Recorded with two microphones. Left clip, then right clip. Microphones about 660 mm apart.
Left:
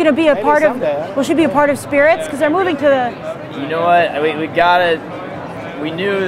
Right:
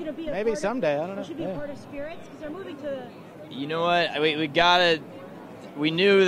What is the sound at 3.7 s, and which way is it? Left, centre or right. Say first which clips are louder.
A man's voice: left 11 dB; right.